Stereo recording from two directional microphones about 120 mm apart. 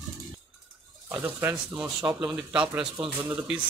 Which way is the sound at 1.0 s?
15° right (ahead or behind).